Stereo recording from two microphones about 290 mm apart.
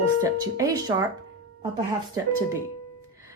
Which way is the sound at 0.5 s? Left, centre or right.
Centre.